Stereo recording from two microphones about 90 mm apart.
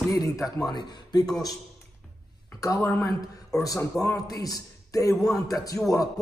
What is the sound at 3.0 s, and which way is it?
A man's voice, 45° left (ahead or behind).